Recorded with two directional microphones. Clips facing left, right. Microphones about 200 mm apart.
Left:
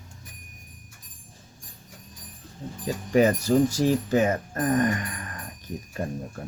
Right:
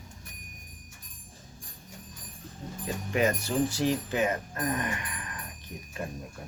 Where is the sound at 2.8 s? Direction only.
35° left (ahead or behind).